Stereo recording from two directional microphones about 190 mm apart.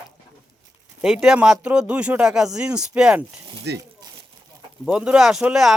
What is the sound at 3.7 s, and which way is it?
Speech, 65° right (ahead or behind).